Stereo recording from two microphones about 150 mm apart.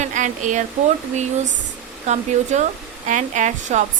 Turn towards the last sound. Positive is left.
turn(degrees=-55)  # may be behind; listen again after turning